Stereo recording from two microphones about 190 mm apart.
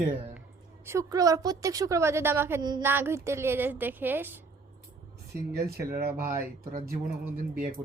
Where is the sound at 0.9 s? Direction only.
15° right (ahead or behind).